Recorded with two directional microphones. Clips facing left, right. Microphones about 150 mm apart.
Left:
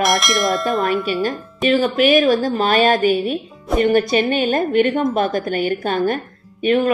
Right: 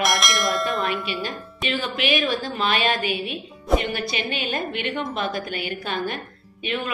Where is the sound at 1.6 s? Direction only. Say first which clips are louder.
Left 11 dB; 45° left (ahead or behind).